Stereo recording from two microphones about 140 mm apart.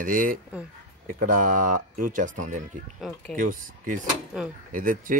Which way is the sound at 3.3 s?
75° right (ahead or behind).